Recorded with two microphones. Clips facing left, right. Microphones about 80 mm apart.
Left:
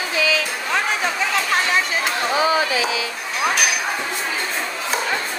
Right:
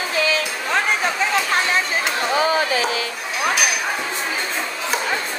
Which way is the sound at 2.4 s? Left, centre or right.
Right.